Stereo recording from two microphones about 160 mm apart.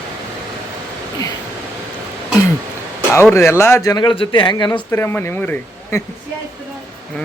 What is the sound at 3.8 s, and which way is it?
Speech, 30° left (ahead or behind).